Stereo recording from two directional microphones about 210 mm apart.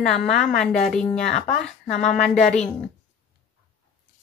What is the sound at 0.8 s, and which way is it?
Speech, 5° left (ahead or behind).